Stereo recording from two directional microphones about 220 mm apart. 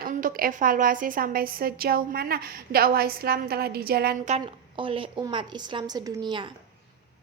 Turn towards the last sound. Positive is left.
turn(degrees=-20)  # may be behind; listen again after turning